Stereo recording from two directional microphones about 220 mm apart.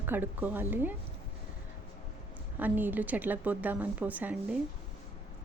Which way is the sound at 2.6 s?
10° right (ahead or behind).